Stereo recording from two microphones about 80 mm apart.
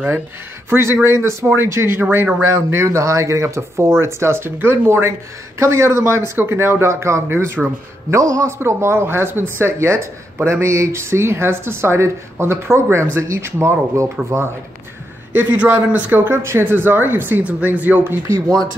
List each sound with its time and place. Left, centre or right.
0.7 s speech: right
2.5 s speech: right
8.1 s speech: right
15.3 s speech: right